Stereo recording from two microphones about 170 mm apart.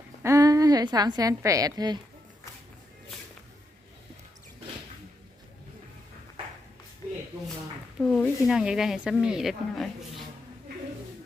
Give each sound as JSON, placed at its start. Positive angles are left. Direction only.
{"t": 0.2, "sound": "a woman's voice", "side_deg": -15}
{"t": 7.9, "sound": "speech", "side_deg": 5}